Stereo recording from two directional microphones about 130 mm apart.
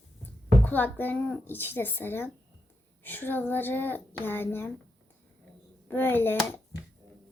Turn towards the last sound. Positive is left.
turn(degrees=15)  # may be behind; listen again after turning